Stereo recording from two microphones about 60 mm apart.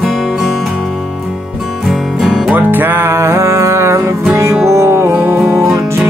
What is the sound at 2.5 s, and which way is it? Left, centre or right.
Music, right.